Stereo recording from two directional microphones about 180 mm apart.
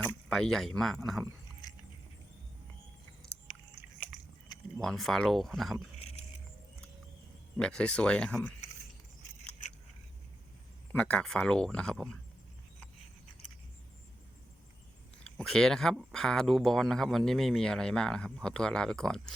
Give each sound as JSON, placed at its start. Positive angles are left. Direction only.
{"t": 0.0, "sound": "speech", "side_deg": 5}
{"t": 3.8, "sound": "biting", "side_deg": -10}
{"t": 4.5, "sound": "speech", "side_deg": 0}
{"t": 6.0, "sound": "vehicle", "side_deg": 35}
{"t": 7.5, "sound": "speech", "side_deg": 5}
{"t": 10.9, "sound": "speech", "side_deg": 5}
{"t": 15.2, "sound": "speech", "side_deg": 5}